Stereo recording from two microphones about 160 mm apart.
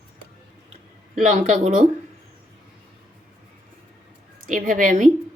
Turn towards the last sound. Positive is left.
turn(degrees=-55)  # may be behind; listen again after turning